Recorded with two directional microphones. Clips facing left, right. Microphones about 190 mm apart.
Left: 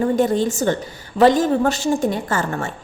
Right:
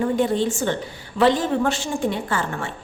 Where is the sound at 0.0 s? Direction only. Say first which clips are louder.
Left 3 dB; 45° left (ahead or behind).